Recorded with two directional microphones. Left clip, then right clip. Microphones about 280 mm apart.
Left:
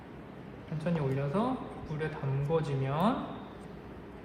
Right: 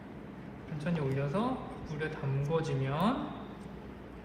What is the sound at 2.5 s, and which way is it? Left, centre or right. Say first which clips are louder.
Speech: left 2 dB; centre.